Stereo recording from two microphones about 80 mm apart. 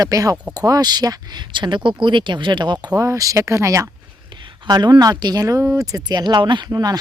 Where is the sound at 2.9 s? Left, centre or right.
Right.